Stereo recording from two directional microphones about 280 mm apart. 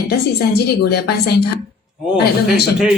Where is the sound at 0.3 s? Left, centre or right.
Left.